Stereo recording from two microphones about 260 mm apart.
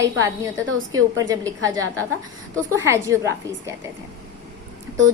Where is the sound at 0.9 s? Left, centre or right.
Right.